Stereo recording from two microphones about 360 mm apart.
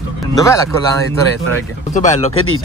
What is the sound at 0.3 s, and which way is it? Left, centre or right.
Speech, centre.